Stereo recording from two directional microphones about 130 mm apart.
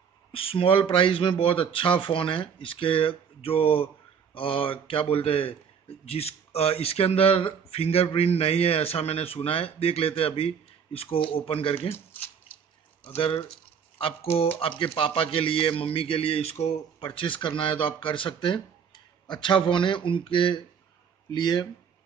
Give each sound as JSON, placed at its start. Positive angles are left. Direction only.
{"t": 0.3, "sound": "speech", "side_deg": 45}
{"t": 11.9, "sound": "speech", "side_deg": 15}
{"t": 13.0, "sound": "a man's voice", "side_deg": 45}